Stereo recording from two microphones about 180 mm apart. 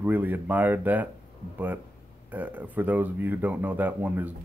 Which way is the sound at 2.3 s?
10° right (ahead or behind).